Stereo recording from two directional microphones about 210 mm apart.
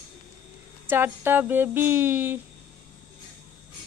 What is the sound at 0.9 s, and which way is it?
Speech, 10° right (ahead or behind).